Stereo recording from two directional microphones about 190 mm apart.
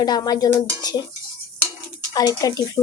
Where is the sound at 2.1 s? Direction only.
20° left (ahead or behind).